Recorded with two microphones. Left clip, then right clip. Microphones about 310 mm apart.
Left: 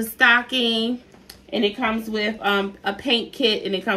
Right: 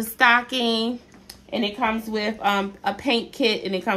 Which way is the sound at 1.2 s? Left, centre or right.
Centre.